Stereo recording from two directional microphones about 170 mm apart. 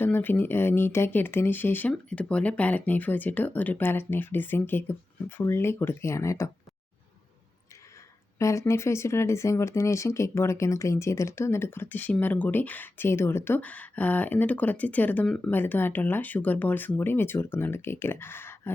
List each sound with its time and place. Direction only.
0.0 s speech: 10° left (ahead or behind)
8.4 s speech: 15° left (ahead or behind)